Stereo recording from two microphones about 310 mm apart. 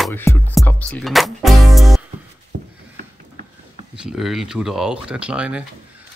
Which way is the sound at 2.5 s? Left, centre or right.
Right.